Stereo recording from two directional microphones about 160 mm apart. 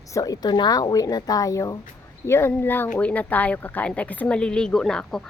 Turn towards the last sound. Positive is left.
turn(degrees=5)  # may be behind; listen again after turning